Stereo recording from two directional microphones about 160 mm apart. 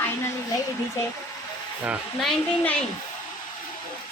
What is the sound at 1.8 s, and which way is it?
Speech, 5° right (ahead or behind).